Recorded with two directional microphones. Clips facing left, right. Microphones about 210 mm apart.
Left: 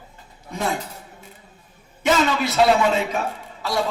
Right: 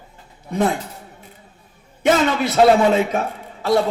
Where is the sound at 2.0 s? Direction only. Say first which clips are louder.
Right 3 dB; 50° right (ahead or behind).